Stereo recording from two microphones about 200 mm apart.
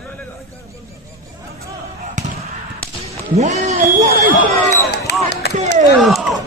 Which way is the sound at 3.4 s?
35° right (ahead or behind).